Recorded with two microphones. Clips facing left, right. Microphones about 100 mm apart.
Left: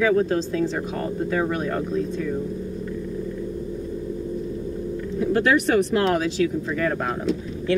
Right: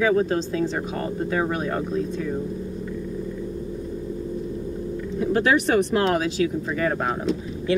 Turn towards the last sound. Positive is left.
turn(degrees=-10)  # may be behind; listen again after turning